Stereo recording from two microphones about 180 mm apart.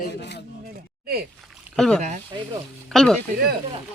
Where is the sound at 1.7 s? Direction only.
5° left (ahead or behind).